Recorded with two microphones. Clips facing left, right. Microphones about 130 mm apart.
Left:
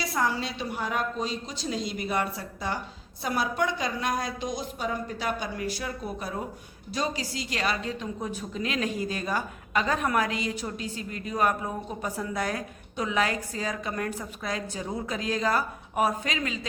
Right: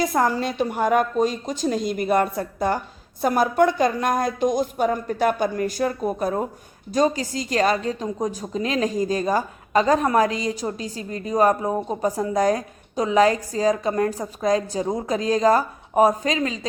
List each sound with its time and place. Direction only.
0.0 s a woman's voice: 50° right (ahead or behind)